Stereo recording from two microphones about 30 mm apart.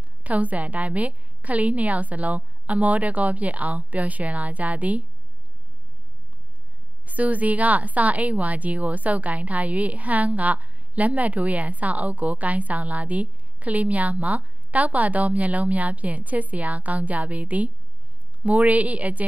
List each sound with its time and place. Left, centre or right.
0.2 s a woman's voice: right
7.1 s a woman's voice: right